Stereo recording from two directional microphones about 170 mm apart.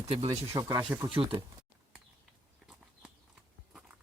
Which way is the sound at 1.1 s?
30° right (ahead or behind).